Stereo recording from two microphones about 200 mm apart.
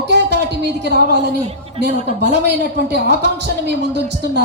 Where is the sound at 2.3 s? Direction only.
55° right (ahead or behind).